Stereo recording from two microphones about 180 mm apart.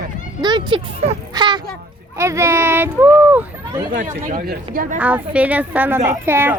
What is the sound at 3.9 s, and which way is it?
Speech, 45° right (ahead or behind).